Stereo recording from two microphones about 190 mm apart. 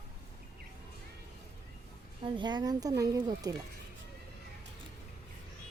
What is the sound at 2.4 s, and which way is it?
Speech, 25° right (ahead or behind).